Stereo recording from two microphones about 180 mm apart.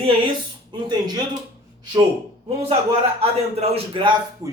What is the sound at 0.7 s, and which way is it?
Speech, 25° right (ahead or behind).